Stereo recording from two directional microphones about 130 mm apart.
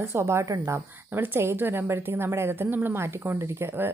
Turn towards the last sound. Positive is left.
turn(degrees=-15)  # may be behind; listen again after turning